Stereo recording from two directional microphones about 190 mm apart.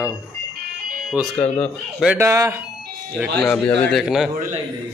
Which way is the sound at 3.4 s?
5° left (ahead or behind).